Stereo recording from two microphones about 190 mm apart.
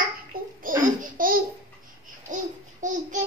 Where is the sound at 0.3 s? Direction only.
50° right (ahead or behind).